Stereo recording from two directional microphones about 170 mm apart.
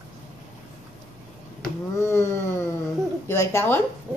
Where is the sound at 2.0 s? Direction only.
15° left (ahead or behind).